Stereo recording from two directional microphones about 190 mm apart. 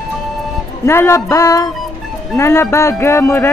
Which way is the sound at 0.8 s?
15° left (ahead or behind).